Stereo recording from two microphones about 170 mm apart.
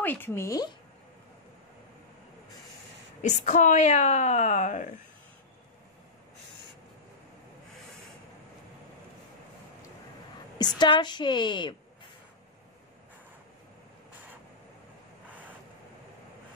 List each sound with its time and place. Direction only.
0.0 s speech: 10° left (ahead or behind)
3.2 s a woman's voice: 45° left (ahead or behind)
10.6 s a woman's voice: 25° left (ahead or behind)